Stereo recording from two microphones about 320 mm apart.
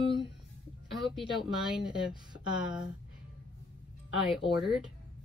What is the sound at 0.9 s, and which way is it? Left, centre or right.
Speech, centre.